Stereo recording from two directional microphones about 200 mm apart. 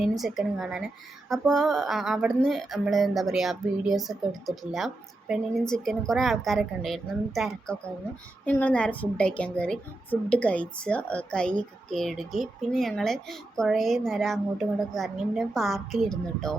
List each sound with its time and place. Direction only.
0.2 s a woman's voice: centre (ahead or behind)